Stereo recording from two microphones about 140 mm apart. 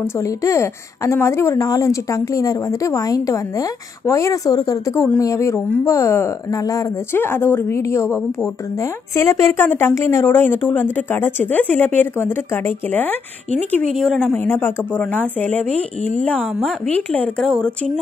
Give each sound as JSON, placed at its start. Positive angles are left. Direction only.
{"t": 0.0, "sound": "a woman's voice", "side_deg": 20}
{"t": 13.9, "sound": "a woman's voice", "side_deg": 5}
{"t": 16.5, "sound": "speech", "side_deg": 0}
{"t": 16.9, "sound": "a woman's voice", "side_deg": 10}